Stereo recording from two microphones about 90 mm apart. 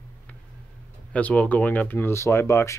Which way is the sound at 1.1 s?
15° left (ahead or behind).